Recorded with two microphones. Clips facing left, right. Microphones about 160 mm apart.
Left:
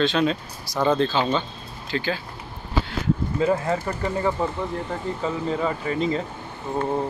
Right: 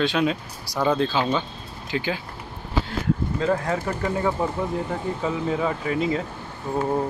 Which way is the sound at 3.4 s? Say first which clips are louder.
Left 3 dB; 5° left (ahead or behind).